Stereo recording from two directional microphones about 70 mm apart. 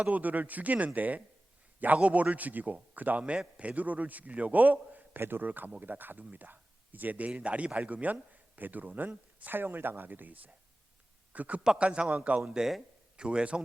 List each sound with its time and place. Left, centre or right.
0.0 s a man's voice: right